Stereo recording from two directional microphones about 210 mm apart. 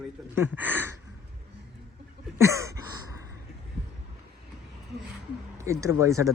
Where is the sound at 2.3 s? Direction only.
15° right (ahead or behind).